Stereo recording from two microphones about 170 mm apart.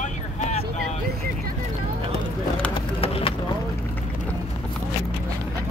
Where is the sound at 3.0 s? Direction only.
35° left (ahead or behind).